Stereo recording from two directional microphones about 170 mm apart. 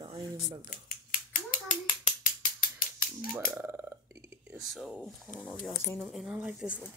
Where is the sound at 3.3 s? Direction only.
10° right (ahead or behind).